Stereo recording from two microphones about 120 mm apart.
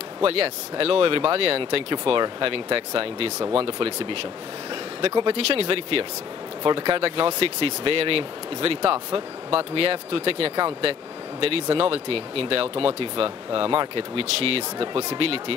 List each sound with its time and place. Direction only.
0.2 s speech: 50° right (ahead or behind)